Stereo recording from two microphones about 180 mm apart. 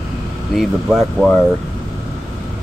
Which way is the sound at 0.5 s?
Centre (ahead or behind).